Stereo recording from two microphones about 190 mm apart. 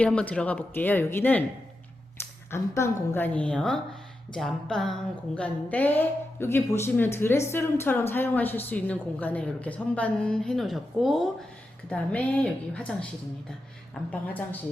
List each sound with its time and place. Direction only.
0.0 s a woman's voice: 5° left (ahead or behind)
2.5 s a woman's voice: 15° left (ahead or behind)
14.1 s a woman's voice: 10° left (ahead or behind)